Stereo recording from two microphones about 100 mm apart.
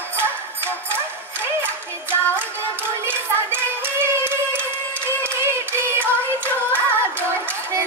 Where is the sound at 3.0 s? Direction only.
20° right (ahead or behind).